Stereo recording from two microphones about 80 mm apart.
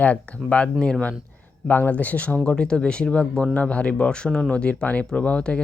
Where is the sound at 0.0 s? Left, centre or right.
Centre.